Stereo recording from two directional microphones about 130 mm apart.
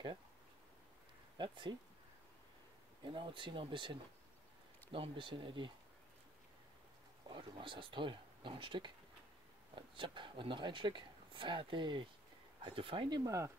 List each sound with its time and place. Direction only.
1.4 s speech: 35° right (ahead or behind)
3.0 s speech: 40° right (ahead or behind)
7.2 s speech: 40° right (ahead or behind)
9.9 s speech: 40° right (ahead or behind)